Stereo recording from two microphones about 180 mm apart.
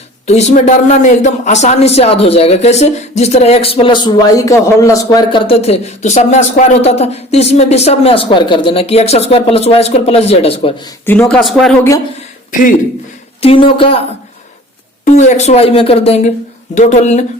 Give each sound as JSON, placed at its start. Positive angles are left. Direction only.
{"t": 0.3, "sound": "speech", "side_deg": 40}
{"t": 5.1, "sound": "speech", "side_deg": 25}
{"t": 11.0, "sound": "speech", "side_deg": 10}
{"t": 11.3, "sound": "speech", "side_deg": 0}
{"t": 12.5, "sound": "speech", "side_deg": 45}
{"t": 13.4, "sound": "speech", "side_deg": 30}
{"t": 15.0, "sound": "speech", "side_deg": 40}